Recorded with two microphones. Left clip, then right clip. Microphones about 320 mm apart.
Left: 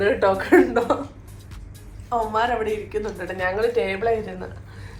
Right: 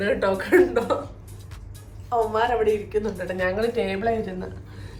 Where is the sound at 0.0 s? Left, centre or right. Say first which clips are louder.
Left 3 dB; centre.